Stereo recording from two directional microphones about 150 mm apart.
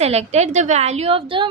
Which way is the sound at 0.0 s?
45° right (ahead or behind).